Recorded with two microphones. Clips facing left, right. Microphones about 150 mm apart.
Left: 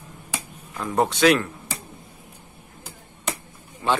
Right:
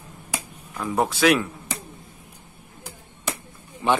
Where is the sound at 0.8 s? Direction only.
5° right (ahead or behind).